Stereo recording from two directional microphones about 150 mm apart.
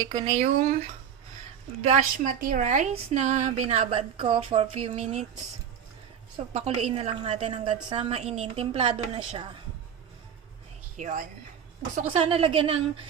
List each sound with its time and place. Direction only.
0.0 s speech: 30° right (ahead or behind)
0.3 s a woman's voice: 50° right (ahead or behind)
6.5 s a woman's voice: 45° right (ahead or behind)
10.9 s a woman's voice: 55° right (ahead or behind)
12.1 s a woman's voice: 40° right (ahead or behind)